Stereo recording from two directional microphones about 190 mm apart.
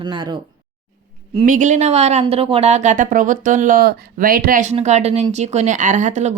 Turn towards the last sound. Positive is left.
turn(degrees=-40)  # may be behind; listen again after turning